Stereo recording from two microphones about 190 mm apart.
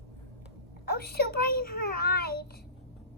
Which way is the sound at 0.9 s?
55° left (ahead or behind).